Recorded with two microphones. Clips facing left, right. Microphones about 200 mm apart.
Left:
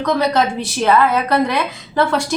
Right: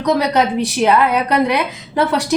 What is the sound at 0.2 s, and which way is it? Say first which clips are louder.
A woman's voice: right 1 dB; 15° right (ahead or behind).